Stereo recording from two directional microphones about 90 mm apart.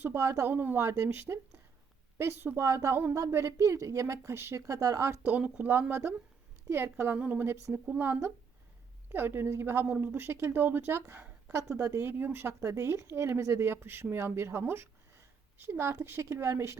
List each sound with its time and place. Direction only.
0.0 s a woman's voice: 30° right (ahead or behind)
0.8 s a woman's voice: 35° right (ahead or behind)
5.2 s a woman's voice: 15° right (ahead or behind); by 16.7 s 30° right (ahead or behind)